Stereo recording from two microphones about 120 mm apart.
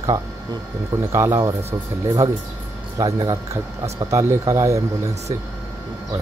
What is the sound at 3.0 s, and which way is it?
A man's voice, 30° right (ahead or behind).